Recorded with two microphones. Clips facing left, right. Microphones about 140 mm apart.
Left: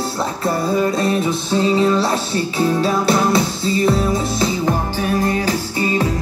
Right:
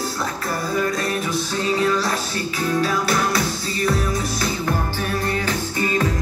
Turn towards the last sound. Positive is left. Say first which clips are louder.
# left 5 dB
turn(degrees=25)  # may be behind; listen again after turning